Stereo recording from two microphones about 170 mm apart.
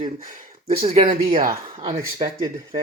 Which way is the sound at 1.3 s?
55° right (ahead or behind).